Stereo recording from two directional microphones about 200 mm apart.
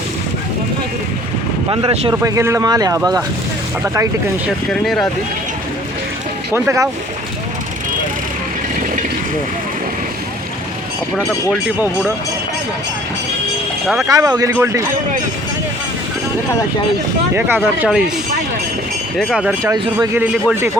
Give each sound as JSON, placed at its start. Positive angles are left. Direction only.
{"t": 1.7, "sound": "speech", "side_deg": -25}
{"t": 2.2, "sound": "speech", "side_deg": -15}
{"t": 4.7, "sound": "speech", "side_deg": 0}
{"t": 6.5, "sound": "speech", "side_deg": -15}
{"t": 11.5, "sound": "speech", "side_deg": -10}
{"t": 13.8, "sound": "speech", "side_deg": 0}
{"t": 14.1, "sound": "speech", "side_deg": -15}
{"t": 17.3, "sound": "speech", "side_deg": -10}
{"t": 19.1, "sound": "speech", "side_deg": 0}
{"t": 19.7, "sound": "speech", "side_deg": -20}